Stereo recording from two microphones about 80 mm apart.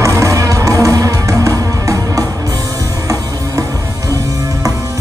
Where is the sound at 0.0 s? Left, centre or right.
Right.